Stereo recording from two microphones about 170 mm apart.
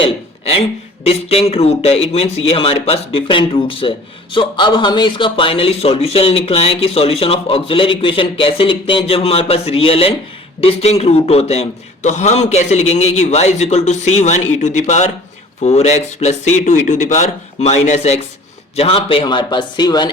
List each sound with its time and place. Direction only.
0.0 s a man's voice: 35° left (ahead or behind)